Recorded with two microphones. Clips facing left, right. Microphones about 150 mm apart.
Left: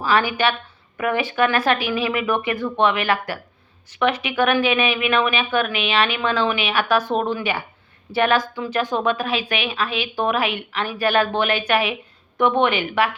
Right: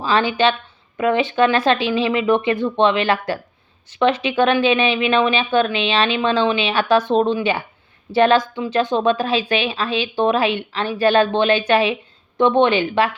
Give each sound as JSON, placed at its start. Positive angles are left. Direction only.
{"t": 0.0, "sound": "a woman's voice", "side_deg": -25}